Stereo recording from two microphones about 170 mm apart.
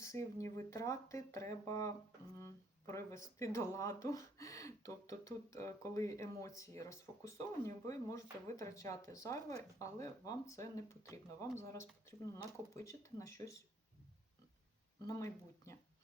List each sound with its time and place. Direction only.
0.0 s speech: 15° left (ahead or behind)
15.0 s speech: 20° left (ahead or behind)